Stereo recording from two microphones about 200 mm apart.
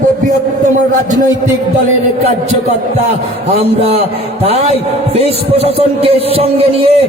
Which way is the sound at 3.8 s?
30° right (ahead or behind).